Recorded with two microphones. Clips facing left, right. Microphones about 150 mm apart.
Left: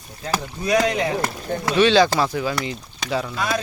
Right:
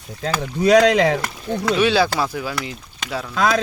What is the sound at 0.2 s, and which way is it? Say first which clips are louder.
Speech: right 5 dB; 80° right.